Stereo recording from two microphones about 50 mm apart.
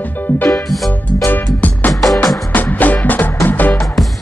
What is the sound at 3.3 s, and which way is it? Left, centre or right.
Music, left.